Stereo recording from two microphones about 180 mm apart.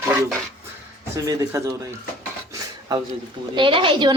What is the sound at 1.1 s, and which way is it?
Speech, 20° right (ahead or behind).